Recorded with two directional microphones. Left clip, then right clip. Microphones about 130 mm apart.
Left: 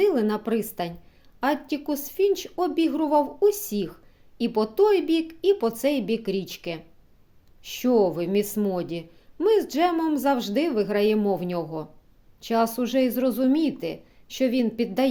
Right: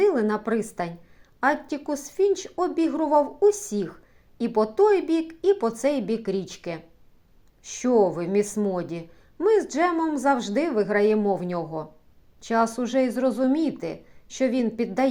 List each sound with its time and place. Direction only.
0.0 s a woman's voice: 20° left (ahead or behind)